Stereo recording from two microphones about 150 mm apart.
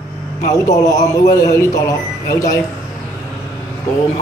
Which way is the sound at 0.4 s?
55° left (ahead or behind).